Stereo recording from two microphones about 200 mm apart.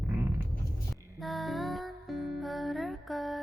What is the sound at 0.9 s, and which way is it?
Music, centre (ahead or behind).